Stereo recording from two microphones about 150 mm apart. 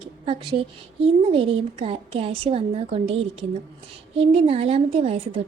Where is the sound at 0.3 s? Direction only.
35° right (ahead or behind).